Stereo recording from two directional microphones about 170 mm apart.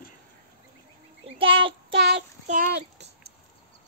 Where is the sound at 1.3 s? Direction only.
30° right (ahead or behind).